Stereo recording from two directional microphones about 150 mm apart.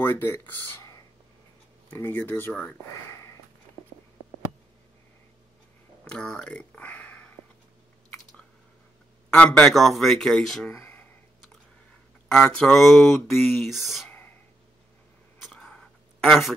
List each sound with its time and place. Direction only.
0.0 s speech: 15° left (ahead or behind)
6.0 s speech: 5° left (ahead or behind)
9.3 s speech: 5° left (ahead or behind)
10.7 s a sound: 15° left (ahead or behind)
12.3 s speech: 5° left (ahead or behind)
15.4 s a sound: centre (ahead or behind)